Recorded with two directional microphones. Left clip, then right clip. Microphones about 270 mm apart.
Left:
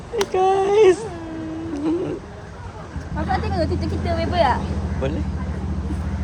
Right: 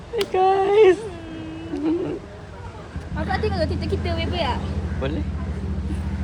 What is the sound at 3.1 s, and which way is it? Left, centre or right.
Speech, right.